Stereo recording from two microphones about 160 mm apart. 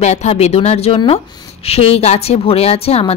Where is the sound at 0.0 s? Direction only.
45° left (ahead or behind).